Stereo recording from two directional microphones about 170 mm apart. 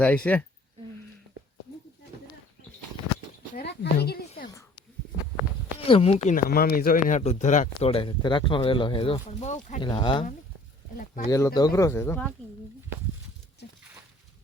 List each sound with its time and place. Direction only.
0.3 s speech: 10° left (ahead or behind)
3.5 s a sound: 70° left (ahead or behind)
5.8 s speech: 35° left (ahead or behind)
6.2 s speech: 55° left (ahead or behind)
7.2 s speech: 40° left (ahead or behind)
9.4 s speech: 45° left (ahead or behind)
9.8 s speech: 25° left (ahead or behind)
10.9 s a sound: 50° left (ahead or behind)
11.3 s speech: 20° left (ahead or behind)